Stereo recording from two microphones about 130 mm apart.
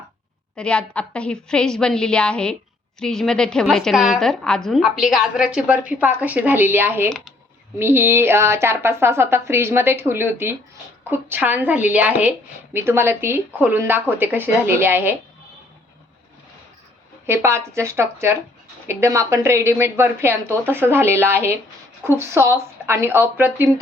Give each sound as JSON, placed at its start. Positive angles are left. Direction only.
{"t": 0.5, "sound": "a woman's voice", "side_deg": 10}
{"t": 17.2, "sound": "a woman's voice", "side_deg": -20}